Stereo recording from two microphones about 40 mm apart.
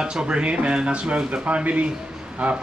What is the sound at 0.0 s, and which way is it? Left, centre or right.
A man's voice, right.